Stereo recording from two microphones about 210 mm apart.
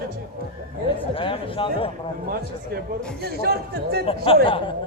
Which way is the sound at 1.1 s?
25° left (ahead or behind).